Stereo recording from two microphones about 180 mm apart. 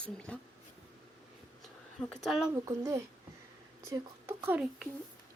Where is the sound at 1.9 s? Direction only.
Centre (ahead or behind).